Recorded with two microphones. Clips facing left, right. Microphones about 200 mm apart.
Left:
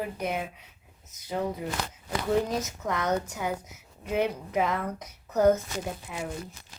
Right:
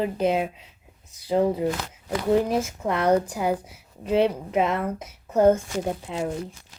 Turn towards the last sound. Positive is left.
turn(degrees=-30)  # may be behind; listen again after turning